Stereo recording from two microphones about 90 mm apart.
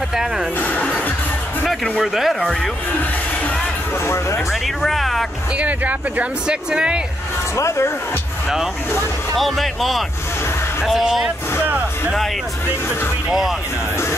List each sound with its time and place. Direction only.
0.1 s speech: 5° right (ahead or behind)
0.6 s music: 15° left (ahead or behind)
1.7 s speech: centre (ahead or behind)
4.0 s speech: 30° left (ahead or behind)
4.5 s speech: centre (ahead or behind)
5.6 s speech: 15° right (ahead or behind)
7.5 s speech: 35° left (ahead or behind)
9.4 s speech: centre (ahead or behind)
13.3 s speech: centre (ahead or behind)